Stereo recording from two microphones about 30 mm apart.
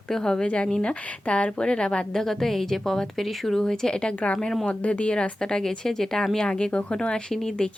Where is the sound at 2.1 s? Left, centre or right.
Centre.